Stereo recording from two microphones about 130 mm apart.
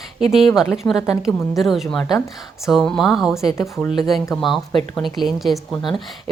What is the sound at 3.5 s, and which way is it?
Speech, 20° left (ahead or behind).